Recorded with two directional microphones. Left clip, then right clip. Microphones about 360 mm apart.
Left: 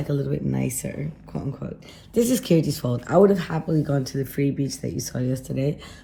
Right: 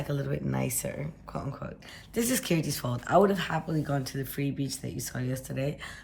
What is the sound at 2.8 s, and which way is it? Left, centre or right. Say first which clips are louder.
Speech: left 4 dB; centre.